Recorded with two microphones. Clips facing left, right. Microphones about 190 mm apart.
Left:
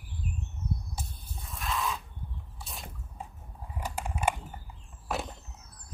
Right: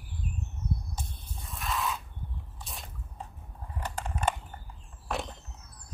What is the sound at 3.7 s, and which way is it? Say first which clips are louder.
Mechanisms: even; 10° left (ahead or behind).